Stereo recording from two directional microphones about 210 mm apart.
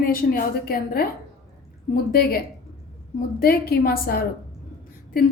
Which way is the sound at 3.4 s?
45° left (ahead or behind).